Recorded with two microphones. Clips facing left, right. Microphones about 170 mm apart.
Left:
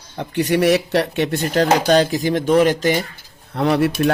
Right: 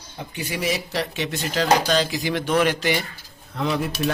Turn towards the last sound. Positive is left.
turn(degrees=70)  # may be behind; listen again after turning